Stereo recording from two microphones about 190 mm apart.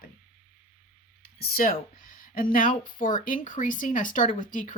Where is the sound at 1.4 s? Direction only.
50° left (ahead or behind).